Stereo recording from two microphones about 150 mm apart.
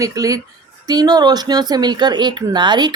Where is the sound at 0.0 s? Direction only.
20° right (ahead or behind).